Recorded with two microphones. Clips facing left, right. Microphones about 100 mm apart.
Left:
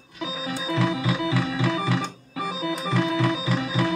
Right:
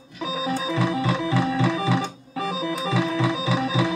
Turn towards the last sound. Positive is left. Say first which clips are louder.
# right 2 dB
turn(degrees=-5)  # may be behind; listen again after turning